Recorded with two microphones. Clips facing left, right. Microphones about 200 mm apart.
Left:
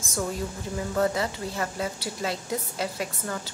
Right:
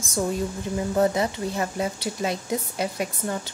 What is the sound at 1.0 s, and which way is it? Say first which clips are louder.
Speech: right 3 dB; 20° right (ahead or behind).